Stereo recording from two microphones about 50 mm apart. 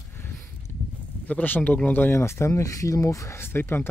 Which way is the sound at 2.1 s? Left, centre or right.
Left.